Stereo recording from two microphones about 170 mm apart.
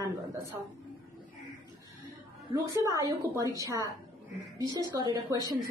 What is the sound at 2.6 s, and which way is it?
A woman's voice, 20° right (ahead or behind).